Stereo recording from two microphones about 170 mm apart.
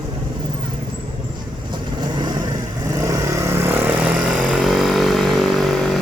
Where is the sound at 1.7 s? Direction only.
25° right (ahead or behind).